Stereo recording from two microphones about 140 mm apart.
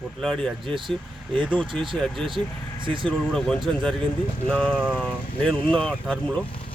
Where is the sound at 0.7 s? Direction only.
35° right (ahead or behind).